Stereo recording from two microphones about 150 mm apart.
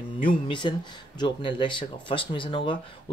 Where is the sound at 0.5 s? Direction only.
30° left (ahead or behind).